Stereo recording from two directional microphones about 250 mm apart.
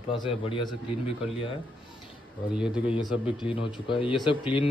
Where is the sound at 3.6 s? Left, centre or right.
Centre.